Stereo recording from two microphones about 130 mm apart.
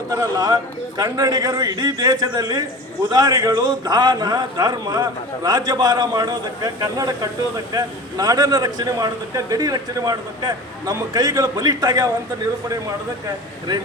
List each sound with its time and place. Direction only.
0.1 s a man's voice: 30° right (ahead or behind)